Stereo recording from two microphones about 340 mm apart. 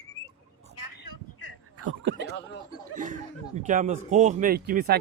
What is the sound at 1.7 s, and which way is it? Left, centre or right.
Snicker, right.